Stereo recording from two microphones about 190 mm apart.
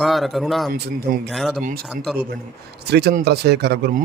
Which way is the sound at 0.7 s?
55° right (ahead or behind).